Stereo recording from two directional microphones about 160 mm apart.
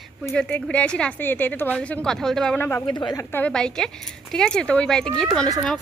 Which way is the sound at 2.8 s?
30° left (ahead or behind).